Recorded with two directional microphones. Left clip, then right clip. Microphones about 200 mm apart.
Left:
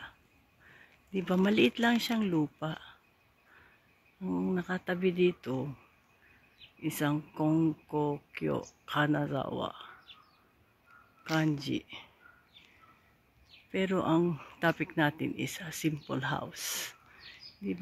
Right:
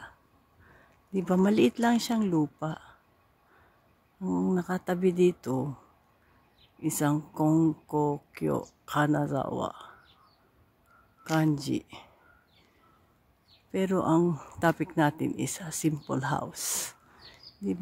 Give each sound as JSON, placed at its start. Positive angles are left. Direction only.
{"t": 1.1, "sound": "speech", "side_deg": -10}
{"t": 4.2, "sound": "speech", "side_deg": -10}
{"t": 6.8, "sound": "speech", "side_deg": -15}
{"t": 11.3, "sound": "speech", "side_deg": -15}
{"t": 13.7, "sound": "speech", "side_deg": -10}